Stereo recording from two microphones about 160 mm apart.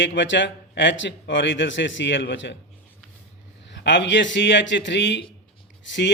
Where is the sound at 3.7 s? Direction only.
90° left.